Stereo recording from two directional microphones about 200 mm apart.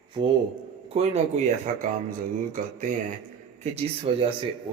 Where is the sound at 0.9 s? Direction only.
35° right (ahead or behind).